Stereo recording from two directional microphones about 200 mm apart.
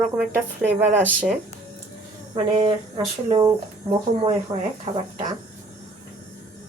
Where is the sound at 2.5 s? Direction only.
25° right (ahead or behind).